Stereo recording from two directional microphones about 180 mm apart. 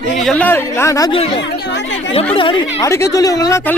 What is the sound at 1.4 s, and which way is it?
Chatter, 85° left.